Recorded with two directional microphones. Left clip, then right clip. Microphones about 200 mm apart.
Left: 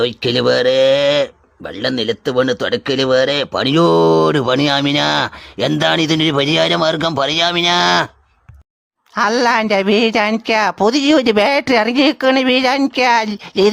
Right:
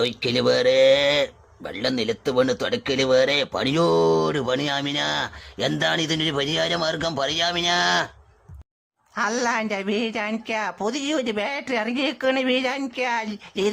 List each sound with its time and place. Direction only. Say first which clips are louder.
0.0 s speech: left 6 dB; 35° left (ahead or behind)
9.1 s speech: left 9 dB; 35° left (ahead or behind)